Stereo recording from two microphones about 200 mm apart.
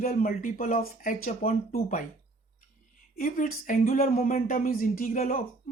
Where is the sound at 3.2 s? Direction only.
45° left (ahead or behind).